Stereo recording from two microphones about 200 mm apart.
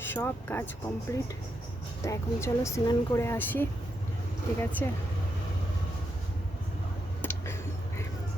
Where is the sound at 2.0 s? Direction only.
15° left (ahead or behind).